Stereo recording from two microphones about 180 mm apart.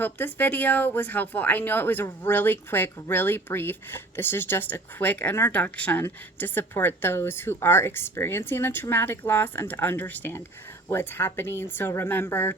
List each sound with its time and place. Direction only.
0.0 s speech: 10° left (ahead or behind)